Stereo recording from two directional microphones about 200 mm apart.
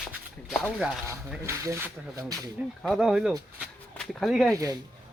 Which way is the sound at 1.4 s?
15° right (ahead or behind).